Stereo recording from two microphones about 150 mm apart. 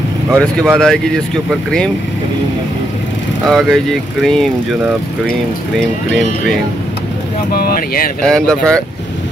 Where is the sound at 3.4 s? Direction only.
Centre (ahead or behind).